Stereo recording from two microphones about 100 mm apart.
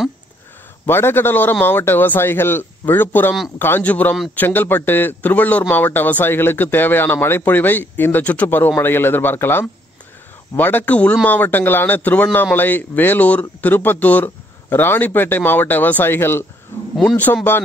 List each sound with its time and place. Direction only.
0.8 s a man's voice: 25° left (ahead or behind)
16.9 s a man's voice: centre (ahead or behind)
17.2 s speech: 15° left (ahead or behind)